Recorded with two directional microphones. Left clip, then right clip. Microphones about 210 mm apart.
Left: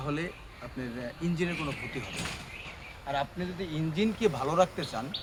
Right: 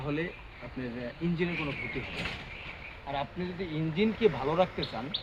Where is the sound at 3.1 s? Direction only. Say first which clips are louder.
Left 2 dB; 25° left (ahead or behind).